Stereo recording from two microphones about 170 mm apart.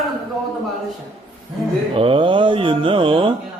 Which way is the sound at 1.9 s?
30° right (ahead or behind).